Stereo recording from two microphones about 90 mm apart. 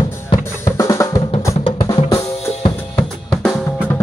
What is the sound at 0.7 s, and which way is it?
Drum, 35° left (ahead or behind).